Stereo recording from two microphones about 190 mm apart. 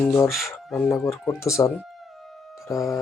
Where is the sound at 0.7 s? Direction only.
10° left (ahead or behind).